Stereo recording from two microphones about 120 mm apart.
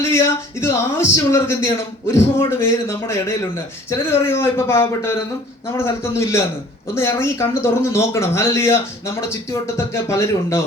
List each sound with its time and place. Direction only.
0.6 s speech: 20° left (ahead or behind)